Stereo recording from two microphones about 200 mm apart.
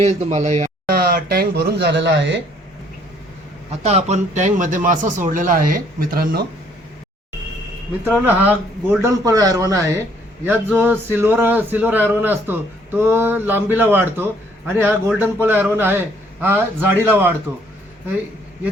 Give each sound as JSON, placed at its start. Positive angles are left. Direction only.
{"t": 0.0, "sound": "speech", "side_deg": -35}
{"t": 0.9, "sound": "speech", "side_deg": -50}
{"t": 3.8, "sound": "speech", "side_deg": -35}
{"t": 8.0, "sound": "speech", "side_deg": -10}